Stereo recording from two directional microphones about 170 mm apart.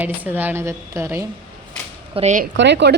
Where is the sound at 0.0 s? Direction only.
10° right (ahead or behind).